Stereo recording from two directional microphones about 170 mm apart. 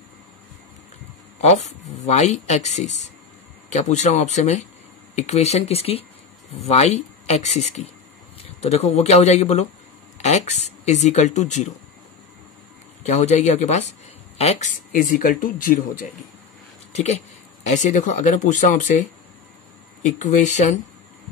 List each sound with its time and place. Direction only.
1.4 s speech: 40° left (ahead or behind)
13.0 s speech: 45° left (ahead or behind)
16.9 s speech: 40° left (ahead or behind)